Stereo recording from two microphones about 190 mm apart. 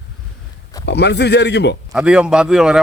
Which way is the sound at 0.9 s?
60° left (ahead or behind).